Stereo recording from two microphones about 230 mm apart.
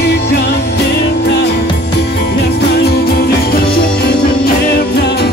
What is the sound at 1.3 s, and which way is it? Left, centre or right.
Music, left.